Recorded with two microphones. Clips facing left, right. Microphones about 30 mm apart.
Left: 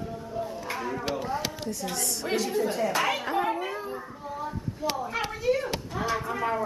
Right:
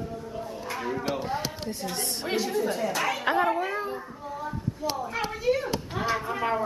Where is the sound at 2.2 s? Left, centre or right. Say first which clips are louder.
Even; centre.